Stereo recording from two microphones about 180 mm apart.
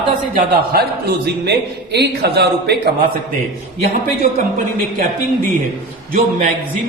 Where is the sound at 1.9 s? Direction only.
60° right (ahead or behind).